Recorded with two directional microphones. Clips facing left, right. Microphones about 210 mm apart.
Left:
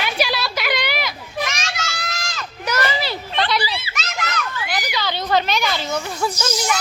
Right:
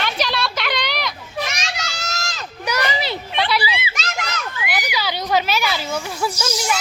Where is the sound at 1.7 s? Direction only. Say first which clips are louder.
Even; 35° right (ahead or behind).